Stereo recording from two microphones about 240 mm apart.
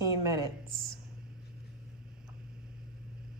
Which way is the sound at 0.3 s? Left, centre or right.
Centre.